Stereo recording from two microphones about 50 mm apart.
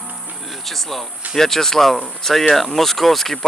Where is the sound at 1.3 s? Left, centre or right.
Centre.